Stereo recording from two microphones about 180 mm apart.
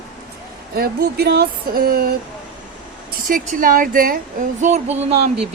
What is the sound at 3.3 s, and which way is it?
Speech, 50° right (ahead or behind).